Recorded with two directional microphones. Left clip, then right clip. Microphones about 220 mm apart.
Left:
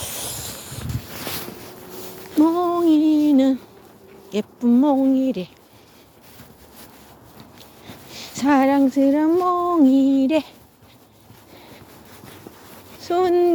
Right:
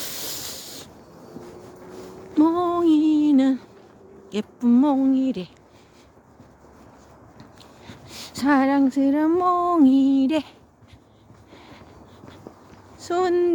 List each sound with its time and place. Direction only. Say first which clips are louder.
0.3 s a sound: left 1 dB; 20° right (ahead or behind)
2.3 s female singing: left 2 dB; 5° right (ahead or behind)
4.3 s speech: left 2 dB; 5° right (ahead or behind)
7.9 s speech: left 2 dB; 5° right (ahead or behind)
13.0 s speech: left 3 dB; centre (ahead or behind)